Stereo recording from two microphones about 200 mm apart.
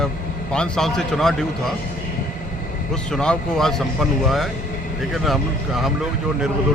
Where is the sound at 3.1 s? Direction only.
5° left (ahead or behind).